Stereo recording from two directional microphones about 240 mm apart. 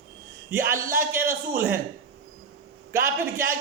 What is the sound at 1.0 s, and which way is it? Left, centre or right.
Speech, centre.